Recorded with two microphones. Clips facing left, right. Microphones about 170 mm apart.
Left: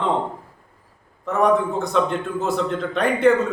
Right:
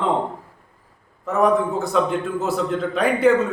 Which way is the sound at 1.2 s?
5° right (ahead or behind).